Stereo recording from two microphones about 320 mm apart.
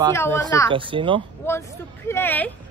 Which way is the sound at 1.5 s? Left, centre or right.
Centre.